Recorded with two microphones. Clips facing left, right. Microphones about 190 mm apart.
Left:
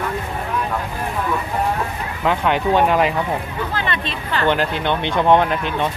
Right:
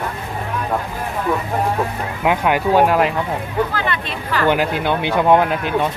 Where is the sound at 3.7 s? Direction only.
25° left (ahead or behind).